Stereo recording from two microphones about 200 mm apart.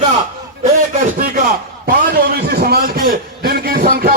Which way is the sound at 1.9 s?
50° right (ahead or behind).